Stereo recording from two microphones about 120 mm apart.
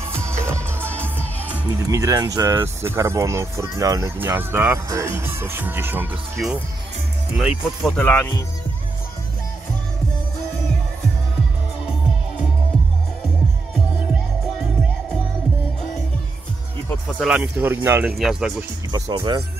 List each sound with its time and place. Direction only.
0.1 s music: 20° right (ahead or behind)
1.9 s speech: 30° right (ahead or behind)
4.2 s speech: 20° right (ahead or behind)
7.3 s speech: 5° right (ahead or behind)
7.9 s speech: 15° left (ahead or behind)
17.2 s speech: 5° right (ahead or behind)
17.6 s speech: 15° right (ahead or behind)
18.1 s speech: 5° right (ahead or behind)
18.9 s speech: 35° right (ahead or behind)